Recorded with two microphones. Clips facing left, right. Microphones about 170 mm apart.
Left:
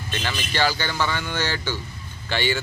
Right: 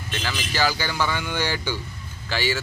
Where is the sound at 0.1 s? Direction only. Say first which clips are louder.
Left 1 dB; centre (ahead or behind).